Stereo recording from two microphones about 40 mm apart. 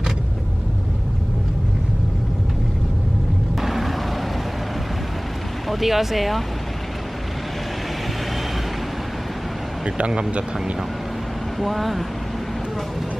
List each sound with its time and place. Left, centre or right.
3.6 s a sound: centre
5.7 s speech: centre
9.8 s speech: right
11.6 s speech: centre